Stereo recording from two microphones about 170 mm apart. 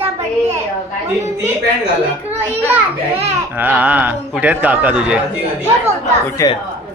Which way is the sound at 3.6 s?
10° right (ahead or behind).